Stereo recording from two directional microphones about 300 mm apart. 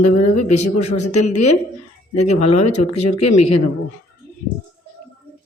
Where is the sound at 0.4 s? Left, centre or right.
Left.